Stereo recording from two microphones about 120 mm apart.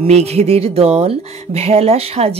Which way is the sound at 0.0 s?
60° right (ahead or behind).